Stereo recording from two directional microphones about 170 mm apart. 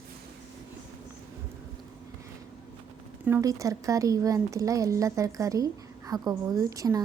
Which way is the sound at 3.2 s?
15° right (ahead or behind).